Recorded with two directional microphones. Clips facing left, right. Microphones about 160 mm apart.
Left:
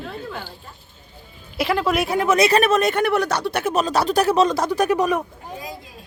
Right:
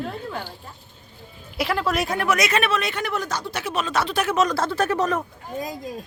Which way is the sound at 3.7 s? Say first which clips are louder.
Left 4 dB; 35° left (ahead or behind).